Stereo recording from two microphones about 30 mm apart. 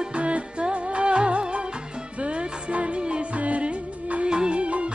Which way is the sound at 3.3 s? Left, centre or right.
Right.